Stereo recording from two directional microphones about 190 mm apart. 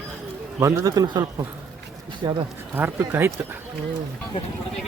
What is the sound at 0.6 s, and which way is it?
Speech, 20° right (ahead or behind).